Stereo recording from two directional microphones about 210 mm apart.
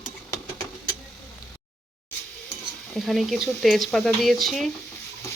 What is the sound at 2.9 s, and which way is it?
Speech, centre (ahead or behind).